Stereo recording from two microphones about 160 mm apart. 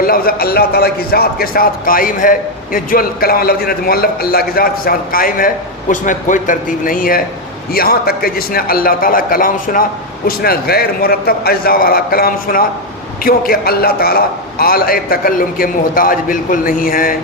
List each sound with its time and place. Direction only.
0.0 s a man's voice: 65° left (ahead or behind)
10.2 s a man's voice: 70° left (ahead or behind)